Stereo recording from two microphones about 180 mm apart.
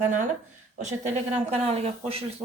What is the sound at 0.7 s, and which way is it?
Speech, 40° right (ahead or behind).